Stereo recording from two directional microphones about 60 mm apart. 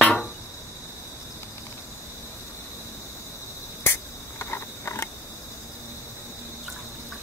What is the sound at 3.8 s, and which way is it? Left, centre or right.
Cricket, left.